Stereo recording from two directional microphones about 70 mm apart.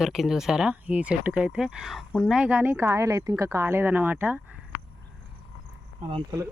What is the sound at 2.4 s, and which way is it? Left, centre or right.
Speech, right.